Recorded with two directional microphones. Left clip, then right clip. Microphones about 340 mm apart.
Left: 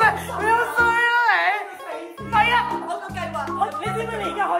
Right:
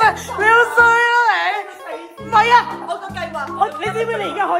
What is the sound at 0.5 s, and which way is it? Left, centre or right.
Music, centre.